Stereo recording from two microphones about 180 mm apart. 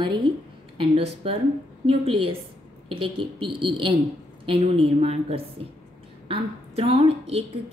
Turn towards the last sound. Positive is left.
turn(degrees=-35)  # may be behind; listen again after turning